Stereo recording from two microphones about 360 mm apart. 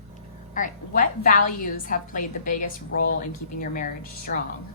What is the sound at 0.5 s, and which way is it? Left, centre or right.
A woman's voice, left.